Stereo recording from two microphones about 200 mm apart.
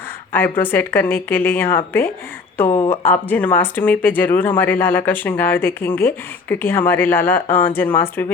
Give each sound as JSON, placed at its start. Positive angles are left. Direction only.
{"t": 0.3, "sound": "speech", "side_deg": 10}
{"t": 2.6, "sound": "speech", "side_deg": 25}
{"t": 2.9, "sound": "speech", "side_deg": 10}